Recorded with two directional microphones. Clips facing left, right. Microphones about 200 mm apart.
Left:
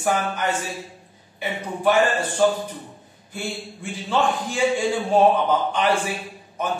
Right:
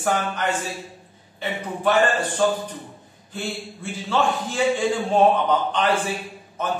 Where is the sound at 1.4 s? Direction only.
10° left (ahead or behind).